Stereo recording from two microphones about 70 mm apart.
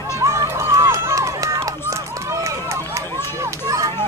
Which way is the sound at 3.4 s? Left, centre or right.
Right.